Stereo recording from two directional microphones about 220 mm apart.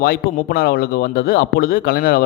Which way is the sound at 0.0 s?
40° left (ahead or behind).